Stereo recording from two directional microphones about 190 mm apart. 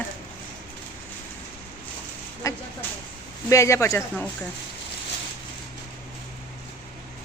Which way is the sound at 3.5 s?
15° left (ahead or behind).